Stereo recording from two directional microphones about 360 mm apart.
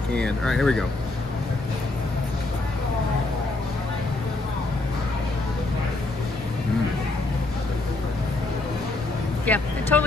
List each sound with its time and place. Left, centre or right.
0.1 s speech: centre
9.5 s speech: centre